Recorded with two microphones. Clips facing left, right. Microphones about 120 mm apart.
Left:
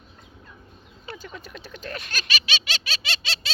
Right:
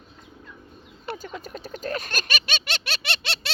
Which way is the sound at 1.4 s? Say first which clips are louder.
Right 5 dB; 40° right (ahead or behind).